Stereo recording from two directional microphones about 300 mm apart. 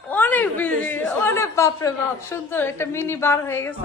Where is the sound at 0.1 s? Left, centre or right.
Centre.